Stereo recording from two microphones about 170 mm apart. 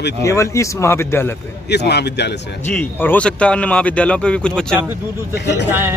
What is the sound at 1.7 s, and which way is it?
Speech, 75° left (ahead or behind).